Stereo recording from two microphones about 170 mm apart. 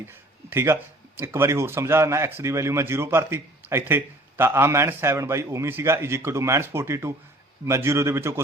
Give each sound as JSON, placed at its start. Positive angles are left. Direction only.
{"t": 0.1, "sound": "speech", "side_deg": -15}